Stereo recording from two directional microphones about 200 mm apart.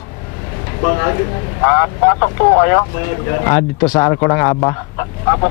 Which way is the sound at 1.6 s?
20° left (ahead or behind).